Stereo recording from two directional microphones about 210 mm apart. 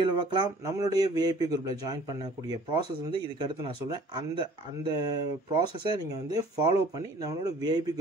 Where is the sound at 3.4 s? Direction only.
20° right (ahead or behind).